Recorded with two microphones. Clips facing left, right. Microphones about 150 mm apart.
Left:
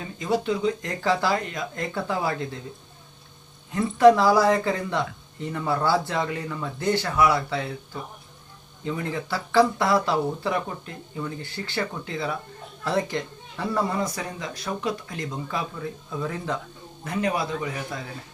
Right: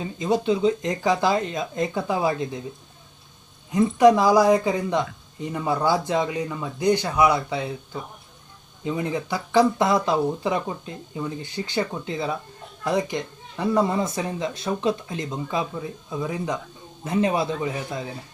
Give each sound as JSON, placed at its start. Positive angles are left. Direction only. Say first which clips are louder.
{"t": 0.0, "sound": "speech", "louder": "right 3 dB", "side_deg": -20}
{"t": 3.7, "sound": "speech", "louder": "even", "side_deg": -15}
{"t": 8.8, "sound": "speech", "louder": "right 3 dB", "side_deg": -20}